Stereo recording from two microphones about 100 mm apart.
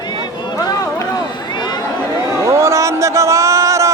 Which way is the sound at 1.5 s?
45° left (ahead or behind).